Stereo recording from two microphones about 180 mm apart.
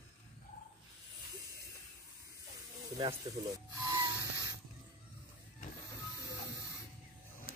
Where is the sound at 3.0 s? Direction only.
25° right (ahead or behind).